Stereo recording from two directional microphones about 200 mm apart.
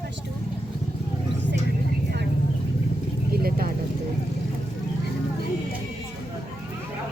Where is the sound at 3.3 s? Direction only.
50° right (ahead or behind).